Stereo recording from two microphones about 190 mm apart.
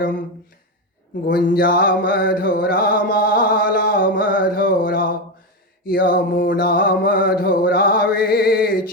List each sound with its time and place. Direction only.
1.3 s music: 50° left (ahead or behind)